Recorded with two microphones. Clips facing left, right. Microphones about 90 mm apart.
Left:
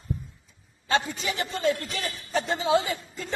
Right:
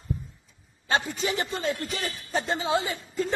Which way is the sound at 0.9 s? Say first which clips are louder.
Even; 30° right (ahead or behind).